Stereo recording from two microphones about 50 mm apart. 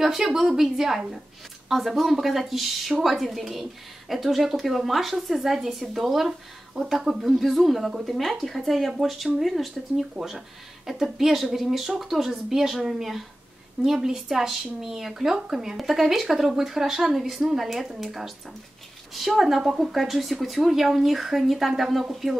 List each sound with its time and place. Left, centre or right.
0.0 s a woman's voice: centre